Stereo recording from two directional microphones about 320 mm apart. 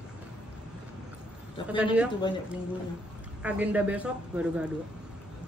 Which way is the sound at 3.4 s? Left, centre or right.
Centre.